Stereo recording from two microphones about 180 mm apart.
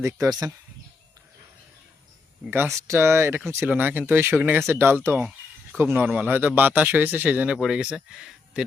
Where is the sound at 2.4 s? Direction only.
10° right (ahead or behind).